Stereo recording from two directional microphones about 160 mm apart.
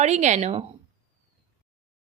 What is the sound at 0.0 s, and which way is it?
Speech, 45° right (ahead or behind).